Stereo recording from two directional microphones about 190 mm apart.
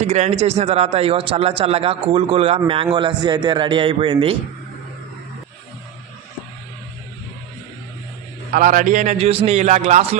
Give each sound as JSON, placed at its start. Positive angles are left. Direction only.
{"t": 0.0, "sound": "a man's voice", "side_deg": -35}
{"t": 8.5, "sound": "a man's voice", "side_deg": -45}